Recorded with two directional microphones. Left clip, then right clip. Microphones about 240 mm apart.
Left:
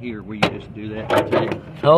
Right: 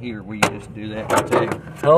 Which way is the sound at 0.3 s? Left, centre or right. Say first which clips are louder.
Right 1 dB; right.